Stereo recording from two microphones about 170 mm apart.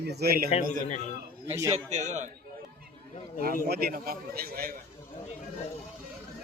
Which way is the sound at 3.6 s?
65° right (ahead or behind).